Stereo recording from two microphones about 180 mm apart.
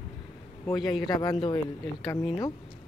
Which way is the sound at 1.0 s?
25° left (ahead or behind).